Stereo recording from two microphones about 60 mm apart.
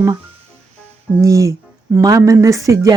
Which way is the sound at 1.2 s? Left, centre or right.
Right.